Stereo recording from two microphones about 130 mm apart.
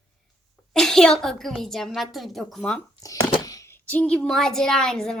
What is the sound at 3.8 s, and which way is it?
A woman's voice, 10° left (ahead or behind).